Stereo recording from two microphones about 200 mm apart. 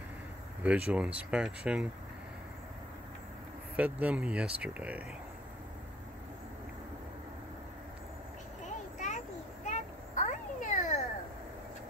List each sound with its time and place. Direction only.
0.7 s speech: 5° right (ahead or behind)
3.7 s speech: 5° right (ahead or behind)
9.7 s children playing: 35° left (ahead or behind)